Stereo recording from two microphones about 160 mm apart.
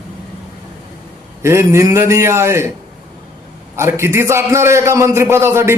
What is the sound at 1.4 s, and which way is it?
A man's voice, 15° right (ahead or behind).